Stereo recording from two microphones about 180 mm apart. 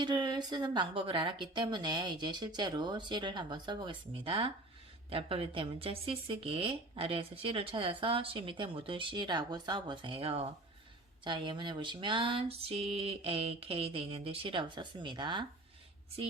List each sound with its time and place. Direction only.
0.0 s speech: 25° right (ahead or behind)